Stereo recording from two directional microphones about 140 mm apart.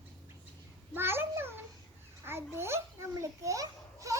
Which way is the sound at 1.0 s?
15° right (ahead or behind).